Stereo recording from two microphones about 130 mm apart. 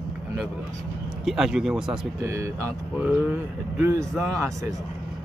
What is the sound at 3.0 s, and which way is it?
Speech, 10° right (ahead or behind).